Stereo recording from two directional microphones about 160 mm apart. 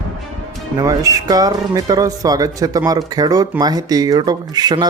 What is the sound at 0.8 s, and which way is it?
Speech, 20° right (ahead or behind).